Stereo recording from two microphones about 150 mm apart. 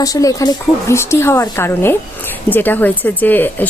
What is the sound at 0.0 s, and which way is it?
A woman's voice, 25° left (ahead or behind).